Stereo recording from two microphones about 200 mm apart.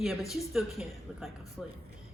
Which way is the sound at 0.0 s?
Centre (ahead or behind).